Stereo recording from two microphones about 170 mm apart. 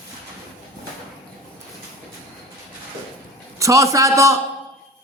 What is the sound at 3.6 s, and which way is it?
Speech, 20° right (ahead or behind).